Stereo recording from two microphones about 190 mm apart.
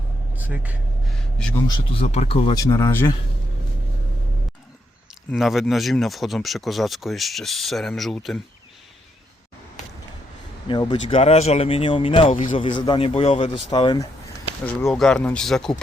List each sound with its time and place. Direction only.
0.3 s speech: 10° right (ahead or behind)
1.1 s speech: 5° left (ahead or behind)
1.6 s speech: 30° left (ahead or behind); by 3.2 s 15° left (ahead or behind)
5.3 s speech: centre (ahead or behind)
10.7 s speech: 25° left (ahead or behind)
14.6 s speech: 5° left (ahead or behind)